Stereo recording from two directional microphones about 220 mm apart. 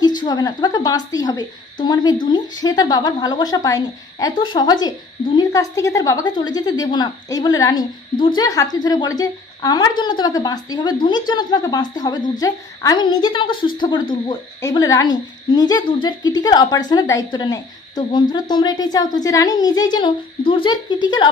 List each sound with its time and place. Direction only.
0.0 s a woman's voice: 20° left (ahead or behind)